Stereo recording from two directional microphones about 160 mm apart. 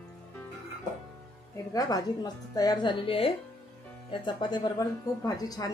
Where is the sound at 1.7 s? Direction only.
25° left (ahead or behind).